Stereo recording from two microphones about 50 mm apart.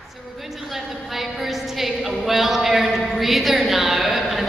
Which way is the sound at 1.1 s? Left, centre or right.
Centre.